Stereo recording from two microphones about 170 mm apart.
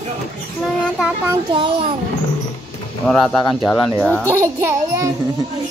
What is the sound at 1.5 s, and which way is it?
Speech, 30° right (ahead or behind).